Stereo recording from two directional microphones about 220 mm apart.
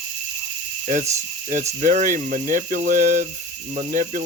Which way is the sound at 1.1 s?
35° right (ahead or behind).